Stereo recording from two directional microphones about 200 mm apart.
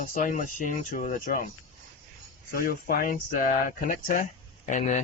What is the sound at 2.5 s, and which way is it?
Speech, 50° left (ahead or behind).